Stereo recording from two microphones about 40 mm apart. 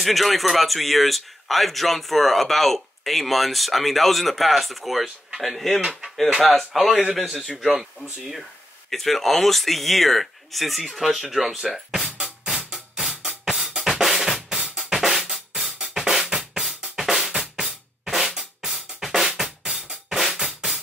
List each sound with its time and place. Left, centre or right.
0.0 s speech: centre
8.9 s speech: centre
12.2 s drum: centre
14.0 s drum kit: centre
14.9 s drum: centre
15.3 s music: centre
15.9 s drum kit: centre
17.0 s drum: centre